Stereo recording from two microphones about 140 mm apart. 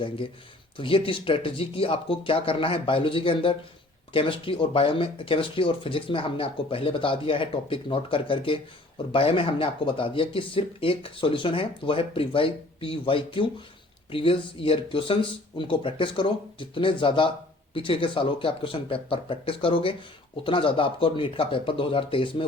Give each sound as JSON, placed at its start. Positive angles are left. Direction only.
{"t": 0.8, "sound": "speech", "side_deg": 40}